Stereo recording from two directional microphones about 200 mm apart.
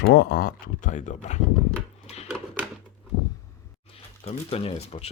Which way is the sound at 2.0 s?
30° left (ahead or behind).